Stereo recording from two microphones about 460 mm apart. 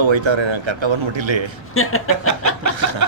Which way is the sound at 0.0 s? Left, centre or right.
Right.